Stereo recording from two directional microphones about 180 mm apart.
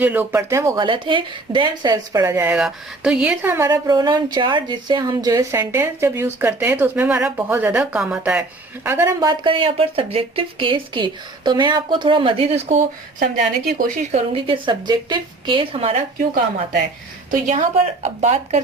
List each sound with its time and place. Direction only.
0.0 s speech: 10° right (ahead or behind)
0.9 s speech: 25° right (ahead or behind)
9.4 s speech: 30° right (ahead or behind); by 14.2 s 50° right (ahead or behind)
14.3 s speech: 30° right (ahead or behind)
17.3 s a woman's voice: 45° right (ahead or behind)